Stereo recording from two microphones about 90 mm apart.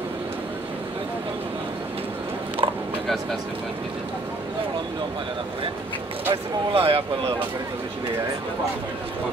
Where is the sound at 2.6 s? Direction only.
75° right (ahead or behind).